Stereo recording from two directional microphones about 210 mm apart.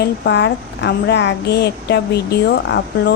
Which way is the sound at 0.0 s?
55° left (ahead or behind).